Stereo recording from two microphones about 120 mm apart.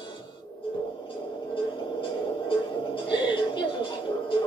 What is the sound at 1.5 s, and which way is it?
Music, 45° left (ahead or behind).